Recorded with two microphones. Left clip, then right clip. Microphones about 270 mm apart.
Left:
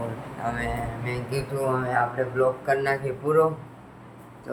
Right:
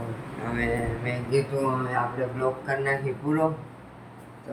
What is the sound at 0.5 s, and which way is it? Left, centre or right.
Speech, left.